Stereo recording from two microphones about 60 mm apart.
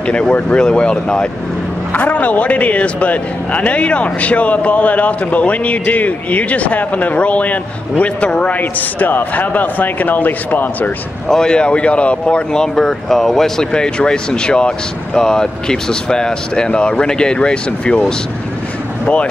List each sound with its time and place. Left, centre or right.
0.0 s speech: centre
1.9 s a man's voice: left
8.5 s a man's voice: left
11.2 s a man's voice: centre
12.7 s speech: centre